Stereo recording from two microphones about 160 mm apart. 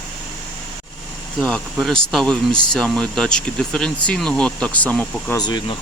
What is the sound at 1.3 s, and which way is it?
Speech, 5° left (ahead or behind).